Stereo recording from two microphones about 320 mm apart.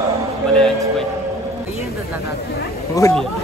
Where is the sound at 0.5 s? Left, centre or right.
Centre.